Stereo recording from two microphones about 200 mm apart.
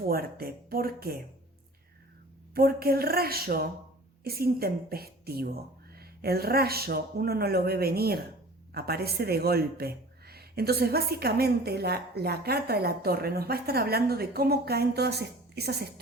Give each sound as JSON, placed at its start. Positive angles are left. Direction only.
{"t": 0.1, "sound": "speech", "side_deg": -50}
{"t": 2.6, "sound": "speech", "side_deg": -50}